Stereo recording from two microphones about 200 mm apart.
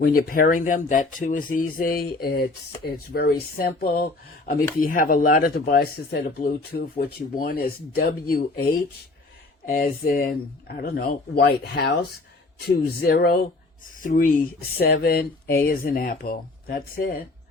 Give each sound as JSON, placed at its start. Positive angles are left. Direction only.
{"t": 0.0, "sound": "speech", "side_deg": 45}